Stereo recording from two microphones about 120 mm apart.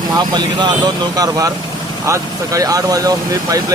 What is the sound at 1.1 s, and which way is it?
Speech, 30° right (ahead or behind).